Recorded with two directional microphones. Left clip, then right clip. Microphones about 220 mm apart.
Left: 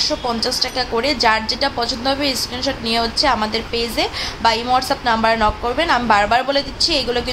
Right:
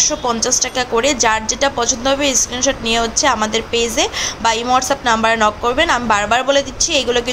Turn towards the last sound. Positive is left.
turn(degrees=-15)  # may be behind; listen again after turning